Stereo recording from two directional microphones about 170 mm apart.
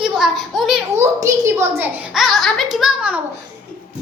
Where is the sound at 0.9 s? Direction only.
15° right (ahead or behind).